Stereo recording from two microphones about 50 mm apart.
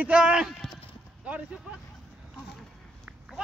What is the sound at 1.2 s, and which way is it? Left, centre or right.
Speech, right.